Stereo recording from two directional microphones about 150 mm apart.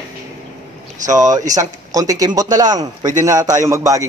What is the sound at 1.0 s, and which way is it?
Speech, 55° right (ahead or behind).